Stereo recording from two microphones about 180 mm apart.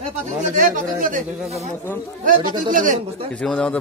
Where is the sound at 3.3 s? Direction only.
5° left (ahead or behind).